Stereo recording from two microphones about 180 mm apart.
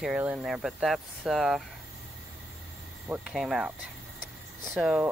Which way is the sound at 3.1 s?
5° right (ahead or behind).